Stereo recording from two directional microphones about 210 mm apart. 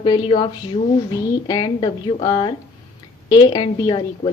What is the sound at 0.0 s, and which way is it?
Speech, 20° left (ahead or behind).